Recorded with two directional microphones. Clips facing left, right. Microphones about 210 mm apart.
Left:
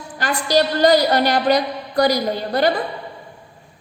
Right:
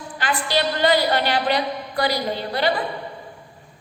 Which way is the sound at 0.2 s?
40° left (ahead or behind).